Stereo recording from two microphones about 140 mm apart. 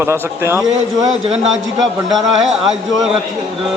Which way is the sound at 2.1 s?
5° right (ahead or behind).